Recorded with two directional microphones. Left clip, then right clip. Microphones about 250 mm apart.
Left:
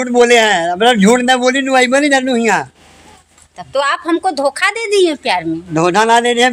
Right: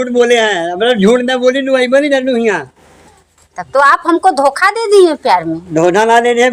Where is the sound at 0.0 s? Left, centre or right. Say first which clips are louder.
Even; left.